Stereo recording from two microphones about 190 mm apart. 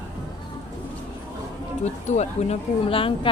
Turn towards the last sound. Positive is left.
turn(degrees=30)  # may be behind; listen again after turning